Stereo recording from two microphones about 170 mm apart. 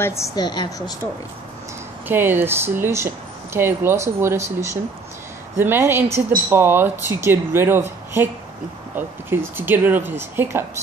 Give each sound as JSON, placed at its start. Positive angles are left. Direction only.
{"t": 0.0, "sound": "a woman's voice", "side_deg": 15}
{"t": 2.0, "sound": "speech", "side_deg": -10}